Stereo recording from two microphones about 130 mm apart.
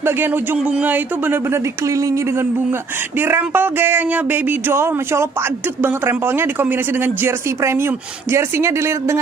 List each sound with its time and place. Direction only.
0.0 s a man's voice: 15° right (ahead or behind)